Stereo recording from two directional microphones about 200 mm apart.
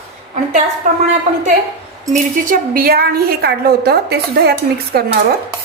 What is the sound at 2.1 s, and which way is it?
A woman's voice, 40° right (ahead or behind).